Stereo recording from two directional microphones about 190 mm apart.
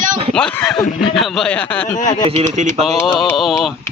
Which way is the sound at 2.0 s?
40° left (ahead or behind).